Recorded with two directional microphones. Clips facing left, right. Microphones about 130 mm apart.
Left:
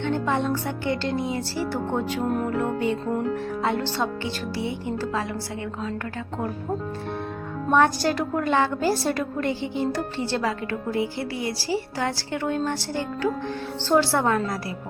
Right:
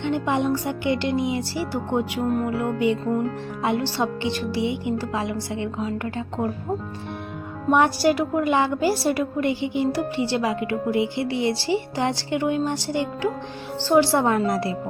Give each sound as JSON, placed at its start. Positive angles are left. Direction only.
{"t": 0.0, "sound": "a woman's voice", "side_deg": -15}
{"t": 7.7, "sound": "a woman's voice", "side_deg": -15}